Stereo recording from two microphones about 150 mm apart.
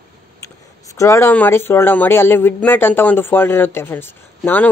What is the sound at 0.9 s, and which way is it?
Speech, 20° left (ahead or behind).